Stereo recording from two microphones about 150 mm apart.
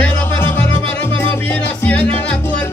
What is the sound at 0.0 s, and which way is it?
Music, 15° left (ahead or behind).